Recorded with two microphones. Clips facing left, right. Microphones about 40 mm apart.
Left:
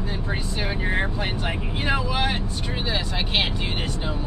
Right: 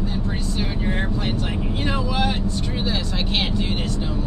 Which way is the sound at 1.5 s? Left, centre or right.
Left.